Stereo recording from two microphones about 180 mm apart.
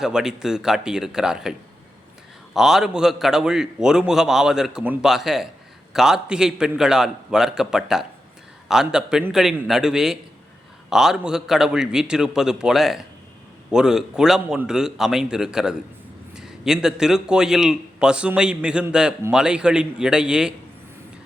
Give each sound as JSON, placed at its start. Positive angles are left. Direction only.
{"t": 0.0, "sound": "a man's voice", "side_deg": -5}